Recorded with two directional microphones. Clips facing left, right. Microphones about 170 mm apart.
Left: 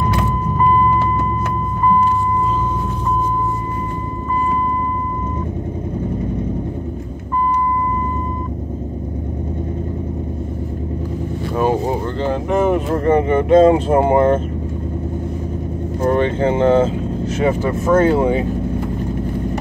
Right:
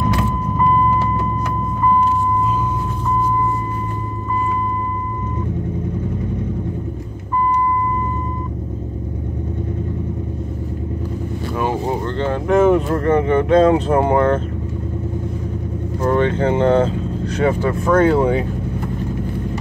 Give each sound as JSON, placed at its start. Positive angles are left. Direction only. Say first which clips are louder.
{"t": 12.2, "sound": "vehicle", "louder": "right 3 dB", "side_deg": 0}
{"t": 13.1, "sound": "speech", "louder": "left 2 dB", "side_deg": 25}
{"t": 16.0, "sound": "speech", "louder": "left 1 dB", "side_deg": 30}